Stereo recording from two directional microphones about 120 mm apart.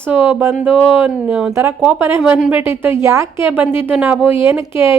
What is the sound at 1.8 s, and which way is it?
A woman's voice, 10° right (ahead or behind).